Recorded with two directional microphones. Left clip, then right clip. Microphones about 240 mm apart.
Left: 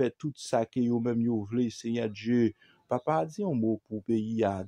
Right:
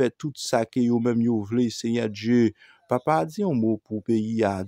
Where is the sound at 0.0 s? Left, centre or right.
Right.